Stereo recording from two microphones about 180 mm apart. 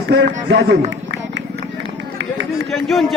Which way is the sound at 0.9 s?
85° right.